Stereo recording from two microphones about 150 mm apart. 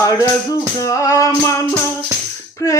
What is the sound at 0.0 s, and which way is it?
Music, 20° left (ahead or behind).